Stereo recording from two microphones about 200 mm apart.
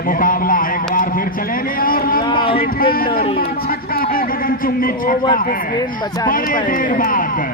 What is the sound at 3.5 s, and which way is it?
A man's voice, 50° left (ahead or behind).